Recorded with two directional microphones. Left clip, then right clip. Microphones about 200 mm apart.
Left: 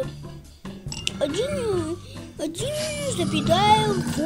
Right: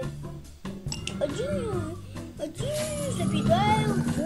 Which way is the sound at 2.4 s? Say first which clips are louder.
Left 4 dB; 60° left (ahead or behind).